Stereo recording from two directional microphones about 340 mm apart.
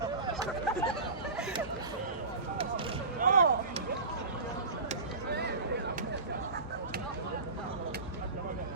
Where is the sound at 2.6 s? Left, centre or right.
Centre.